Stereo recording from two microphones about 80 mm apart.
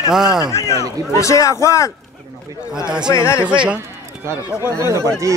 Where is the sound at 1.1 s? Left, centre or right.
Left.